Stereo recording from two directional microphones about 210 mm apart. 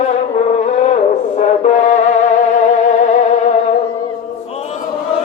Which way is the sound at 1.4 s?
35° left (ahead or behind).